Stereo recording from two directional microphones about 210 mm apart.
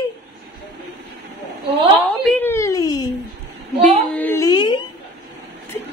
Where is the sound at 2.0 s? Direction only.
10° left (ahead or behind).